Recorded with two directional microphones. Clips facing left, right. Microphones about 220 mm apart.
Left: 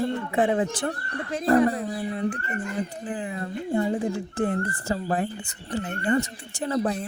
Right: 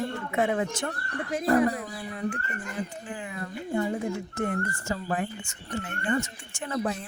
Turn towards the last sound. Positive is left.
turn(degrees=35)  # may be behind; listen again after turning